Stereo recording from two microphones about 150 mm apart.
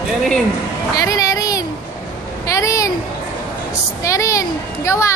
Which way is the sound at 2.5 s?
20° left (ahead or behind).